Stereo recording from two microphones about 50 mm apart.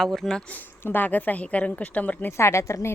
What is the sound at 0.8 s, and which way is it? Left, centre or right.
Speech, left.